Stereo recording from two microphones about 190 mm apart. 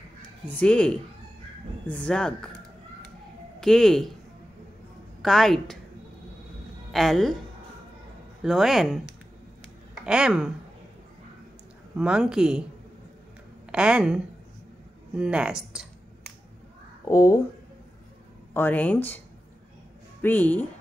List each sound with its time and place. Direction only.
0.5 s speech: 5° left (ahead or behind)
3.6 s speech: centre (ahead or behind)
5.2 s speech: centre (ahead or behind)
6.9 s speech: centre (ahead or behind)
8.4 s speech: centre (ahead or behind)
10.0 s speech: 5° right (ahead or behind)
12.0 s speech: 5° right (ahead or behind)
13.7 s a woman's voice: 5° right (ahead or behind)
15.1 s a sound: 5° right (ahead or behind)
17.1 s speech: 15° left (ahead or behind)
18.5 s speech: 10° left (ahead or behind)